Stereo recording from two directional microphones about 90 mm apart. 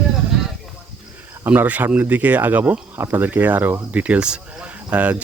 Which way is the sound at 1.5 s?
15° right (ahead or behind).